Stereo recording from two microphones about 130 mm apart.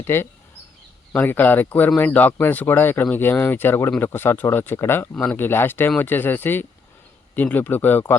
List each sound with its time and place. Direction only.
0.0 s speech: 20° left (ahead or behind)